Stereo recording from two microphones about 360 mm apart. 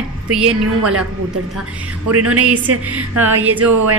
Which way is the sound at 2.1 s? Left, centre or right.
Right.